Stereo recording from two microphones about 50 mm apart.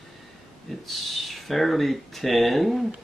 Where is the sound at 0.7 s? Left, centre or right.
Centre.